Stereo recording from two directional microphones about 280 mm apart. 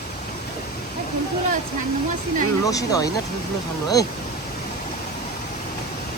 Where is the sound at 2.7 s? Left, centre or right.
Centre.